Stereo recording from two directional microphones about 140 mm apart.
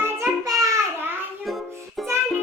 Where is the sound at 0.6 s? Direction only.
20° right (ahead or behind).